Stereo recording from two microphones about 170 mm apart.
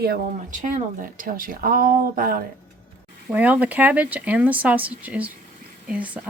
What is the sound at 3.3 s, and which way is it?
Speech, 10° right (ahead or behind).